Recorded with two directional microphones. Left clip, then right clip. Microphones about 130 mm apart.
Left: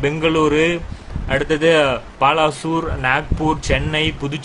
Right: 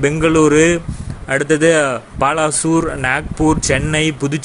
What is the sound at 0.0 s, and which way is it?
Speech, 40° right (ahead or behind).